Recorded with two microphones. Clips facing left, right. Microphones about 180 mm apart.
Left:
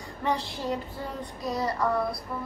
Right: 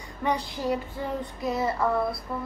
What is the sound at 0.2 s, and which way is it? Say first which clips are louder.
Speech: right 2 dB; 15° right (ahead or behind).